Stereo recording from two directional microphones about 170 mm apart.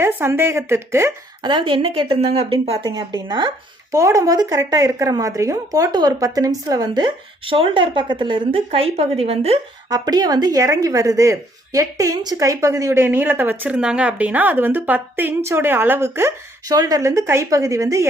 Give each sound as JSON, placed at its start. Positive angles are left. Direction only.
{"t": 0.0, "sound": "a woman's voice", "side_deg": -15}
{"t": 1.4, "sound": "speech", "side_deg": -25}
{"t": 2.9, "sound": "a woman's voice", "side_deg": -25}
{"t": 9.9, "sound": "a woman's voice", "side_deg": -25}